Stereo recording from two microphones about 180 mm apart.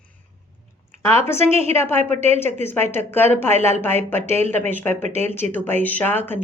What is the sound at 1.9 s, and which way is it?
Speech, 35° right (ahead or behind).